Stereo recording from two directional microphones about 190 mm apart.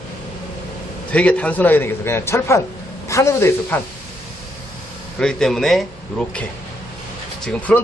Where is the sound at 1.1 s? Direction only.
5° left (ahead or behind).